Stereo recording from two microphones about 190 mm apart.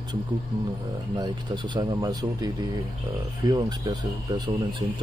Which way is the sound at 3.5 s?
20° right (ahead or behind).